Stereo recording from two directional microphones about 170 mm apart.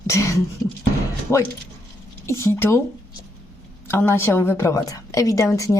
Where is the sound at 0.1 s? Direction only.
20° left (ahead or behind).